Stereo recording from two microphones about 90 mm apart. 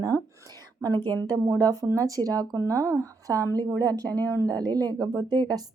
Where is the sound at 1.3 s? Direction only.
45° right (ahead or behind).